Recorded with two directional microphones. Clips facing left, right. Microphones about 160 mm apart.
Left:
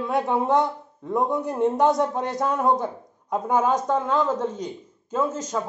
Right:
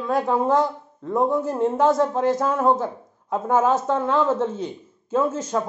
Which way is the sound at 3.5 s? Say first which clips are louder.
Right 2 dB; 5° right (ahead or behind).